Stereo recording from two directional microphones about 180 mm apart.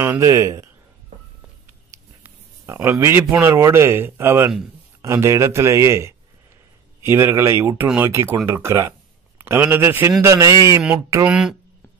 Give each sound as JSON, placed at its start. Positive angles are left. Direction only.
{"t": 0.0, "sound": "speech", "side_deg": -15}
{"t": 2.2, "sound": "speech", "side_deg": -15}
{"t": 11.2, "sound": "speech", "side_deg": -5}